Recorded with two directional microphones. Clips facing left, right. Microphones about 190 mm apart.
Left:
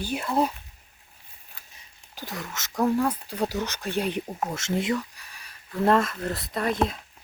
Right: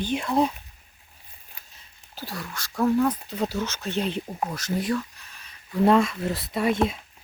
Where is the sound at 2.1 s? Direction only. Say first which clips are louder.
Even; 20° left (ahead or behind).